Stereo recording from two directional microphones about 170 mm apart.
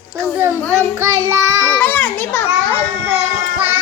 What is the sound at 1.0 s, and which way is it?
Child singing, 15° right (ahead or behind).